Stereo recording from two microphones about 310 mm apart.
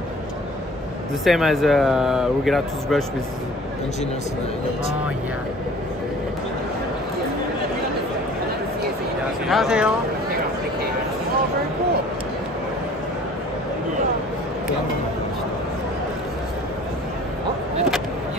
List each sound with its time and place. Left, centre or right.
1.2 s speech: centre
9.5 s speech: centre